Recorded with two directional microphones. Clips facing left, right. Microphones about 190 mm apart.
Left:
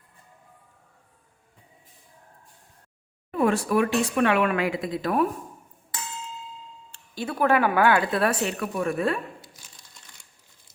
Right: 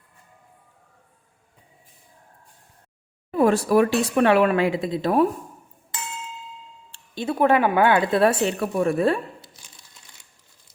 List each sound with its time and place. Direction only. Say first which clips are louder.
3.3 s speech: right 4 dB; 35° right (ahead or behind)
6.9 s speech: right 5 dB; 25° right (ahead or behind)